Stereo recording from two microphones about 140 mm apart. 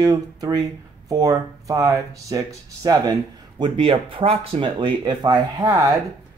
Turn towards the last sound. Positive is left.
turn(degrees=-20)  # may be behind; listen again after turning